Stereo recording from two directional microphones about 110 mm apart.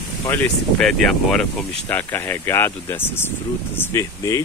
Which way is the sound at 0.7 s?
5° left (ahead or behind).